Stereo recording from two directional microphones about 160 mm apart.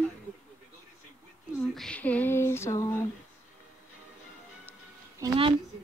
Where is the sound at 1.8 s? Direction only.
5° left (ahead or behind).